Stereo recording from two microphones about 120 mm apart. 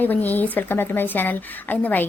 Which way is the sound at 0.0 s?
15° left (ahead or behind).